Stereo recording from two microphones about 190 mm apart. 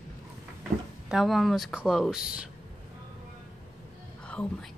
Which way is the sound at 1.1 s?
Centre (ahead or behind).